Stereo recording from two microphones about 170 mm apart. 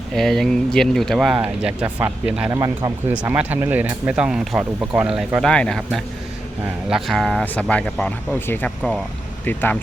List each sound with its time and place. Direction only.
0.1 s speech: centre (ahead or behind)
2.5 s speech: 20° right (ahead or behind)
3.1 s speech: 10° right (ahead or behind); by 9.7 s 10° left (ahead or behind)